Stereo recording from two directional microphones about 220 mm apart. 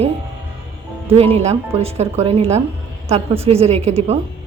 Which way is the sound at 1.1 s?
25° right (ahead or behind).